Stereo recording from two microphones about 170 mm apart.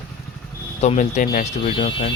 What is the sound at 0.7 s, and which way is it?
Speech, 40° left (ahead or behind).